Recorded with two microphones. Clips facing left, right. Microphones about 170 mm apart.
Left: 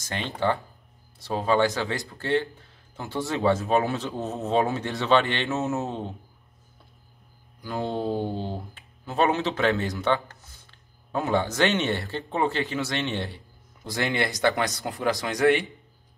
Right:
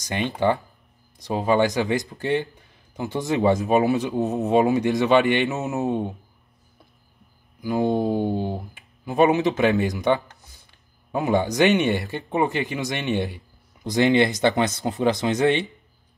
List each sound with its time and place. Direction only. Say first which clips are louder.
0.0 s speech: right 5 dB; 15° right (ahead or behind)
7.6 s speech: right 6 dB; 15° right (ahead or behind)